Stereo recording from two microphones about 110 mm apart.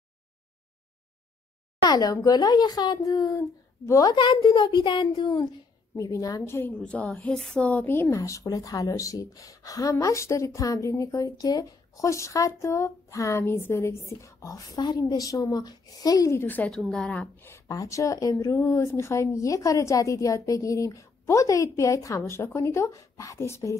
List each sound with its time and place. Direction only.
1.9 s speech: 35° left (ahead or behind)
6.7 s speech: 10° left (ahead or behind)
7.6 s speech: 15° left (ahead or behind)
8.2 s speech: 30° left (ahead or behind)
14.8 s speech: 40° left (ahead or behind); by 16.6 s 20° left (ahead or behind)
16.6 s a woman's voice: 5° left (ahead or behind)
17.4 s speech: 25° left (ahead or behind)